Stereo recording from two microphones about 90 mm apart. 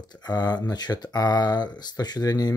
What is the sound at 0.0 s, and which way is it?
Speech, 50° left (ahead or behind).